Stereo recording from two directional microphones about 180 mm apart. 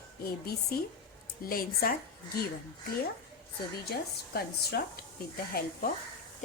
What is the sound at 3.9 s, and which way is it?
A woman's voice, 60° left (ahead or behind).